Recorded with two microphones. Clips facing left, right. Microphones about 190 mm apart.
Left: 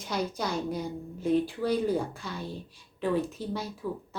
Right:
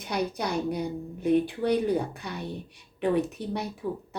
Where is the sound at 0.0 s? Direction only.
60° right (ahead or behind).